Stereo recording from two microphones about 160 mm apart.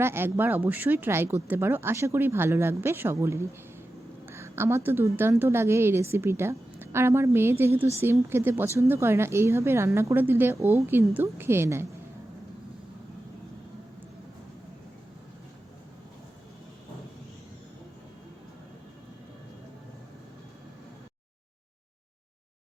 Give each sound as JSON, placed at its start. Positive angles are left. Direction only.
{"t": 0.0, "sound": "a woman's voice", "side_deg": -15}